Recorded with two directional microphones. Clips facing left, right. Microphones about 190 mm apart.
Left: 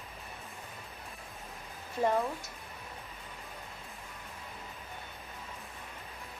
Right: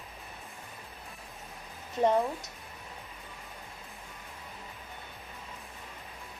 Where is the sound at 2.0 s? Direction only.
20° right (ahead or behind).